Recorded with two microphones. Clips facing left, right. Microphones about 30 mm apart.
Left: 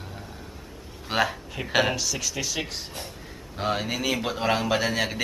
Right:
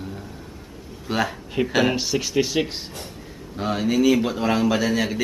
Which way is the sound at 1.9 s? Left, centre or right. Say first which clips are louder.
Right 7 dB; right.